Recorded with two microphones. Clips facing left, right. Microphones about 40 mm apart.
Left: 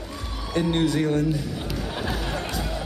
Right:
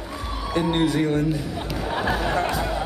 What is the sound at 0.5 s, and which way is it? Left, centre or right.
Speech, centre.